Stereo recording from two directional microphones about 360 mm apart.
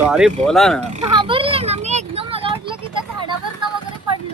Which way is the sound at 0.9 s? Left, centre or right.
Centre.